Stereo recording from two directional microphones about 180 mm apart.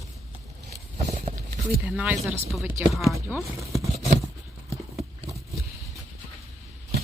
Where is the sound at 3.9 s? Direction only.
35° right (ahead or behind).